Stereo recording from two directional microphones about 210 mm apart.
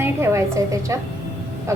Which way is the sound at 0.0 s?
15° right (ahead or behind).